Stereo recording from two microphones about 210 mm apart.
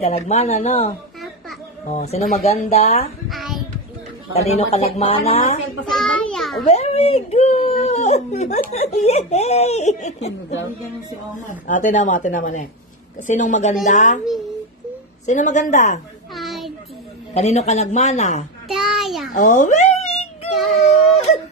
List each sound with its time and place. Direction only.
0.0 s speech: 30° left (ahead or behind)
3.3 s child singing: centre (ahead or behind)
4.3 s a woman's voice: 30° left (ahead or behind)
5.9 s a sound: centre (ahead or behind)
6.6 s speech: 30° left (ahead or behind)
11.6 s speech: 35° left (ahead or behind)
15.2 s speech: 35° left (ahead or behind)
16.3 s a sound: centre (ahead or behind)
17.3 s speech: 30° left (ahead or behind)
18.7 s a child's voice: centre (ahead or behind)
19.3 s speech: 35° left (ahead or behind)